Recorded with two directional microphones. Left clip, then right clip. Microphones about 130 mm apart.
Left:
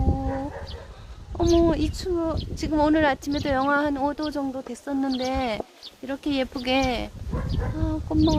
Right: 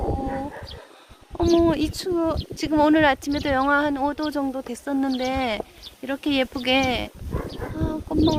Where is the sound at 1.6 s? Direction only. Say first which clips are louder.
Right 1 dB; 25° right (ahead or behind).